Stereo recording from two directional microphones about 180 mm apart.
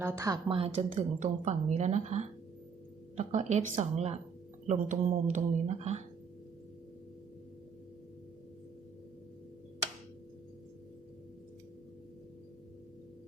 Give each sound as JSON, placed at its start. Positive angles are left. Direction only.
{"t": 0.0, "sound": "a woman's voice", "side_deg": -15}
{"t": 0.4, "sound": "speech", "side_deg": -30}